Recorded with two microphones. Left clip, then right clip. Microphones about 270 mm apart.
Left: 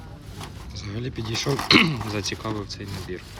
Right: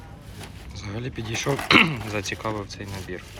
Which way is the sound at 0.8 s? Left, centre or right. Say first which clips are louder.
Even; centre.